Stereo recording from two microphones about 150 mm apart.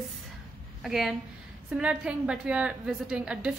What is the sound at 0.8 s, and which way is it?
A woman's voice, centre (ahead or behind).